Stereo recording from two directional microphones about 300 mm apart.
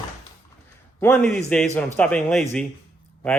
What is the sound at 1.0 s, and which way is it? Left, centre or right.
Speech, centre.